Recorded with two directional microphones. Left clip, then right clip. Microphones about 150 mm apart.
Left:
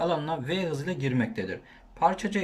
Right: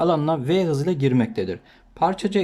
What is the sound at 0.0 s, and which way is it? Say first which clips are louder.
Speech: right 7 dB; 35° right (ahead or behind).